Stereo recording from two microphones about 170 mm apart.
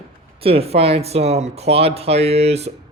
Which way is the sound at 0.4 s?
35° right (ahead or behind).